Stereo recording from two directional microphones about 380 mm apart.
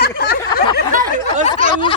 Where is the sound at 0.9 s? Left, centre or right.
Right.